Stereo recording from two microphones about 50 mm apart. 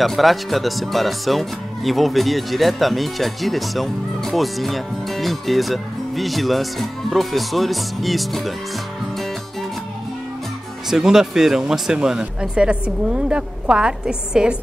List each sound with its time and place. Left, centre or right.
0.0 s speech: centre
10.9 s speech: centre